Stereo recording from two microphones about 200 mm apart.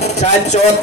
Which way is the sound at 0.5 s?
35° left (ahead or behind).